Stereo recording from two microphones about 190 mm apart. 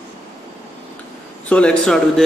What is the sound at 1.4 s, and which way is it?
Speech, 5° left (ahead or behind).